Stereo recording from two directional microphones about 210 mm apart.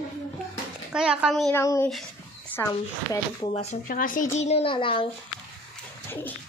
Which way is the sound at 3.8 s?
40° left (ahead or behind).